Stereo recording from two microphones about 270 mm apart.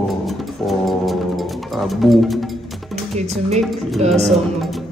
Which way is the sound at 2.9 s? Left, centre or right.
Right.